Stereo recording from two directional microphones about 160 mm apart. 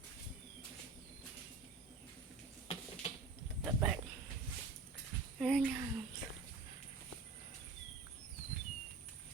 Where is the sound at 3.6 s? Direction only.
15° right (ahead or behind).